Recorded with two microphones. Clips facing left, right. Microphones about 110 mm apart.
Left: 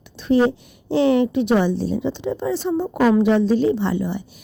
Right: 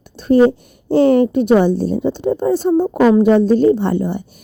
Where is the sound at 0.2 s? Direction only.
45° right (ahead or behind).